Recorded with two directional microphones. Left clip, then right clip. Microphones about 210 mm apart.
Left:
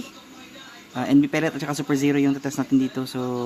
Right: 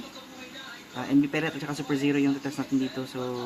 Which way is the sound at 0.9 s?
55° left (ahead or behind).